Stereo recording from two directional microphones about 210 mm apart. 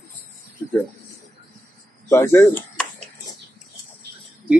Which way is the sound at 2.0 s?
10° left (ahead or behind).